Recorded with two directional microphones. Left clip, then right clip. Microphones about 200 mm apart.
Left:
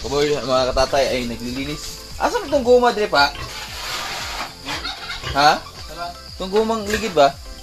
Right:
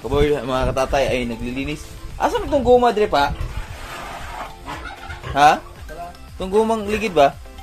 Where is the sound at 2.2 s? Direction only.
25° right (ahead or behind).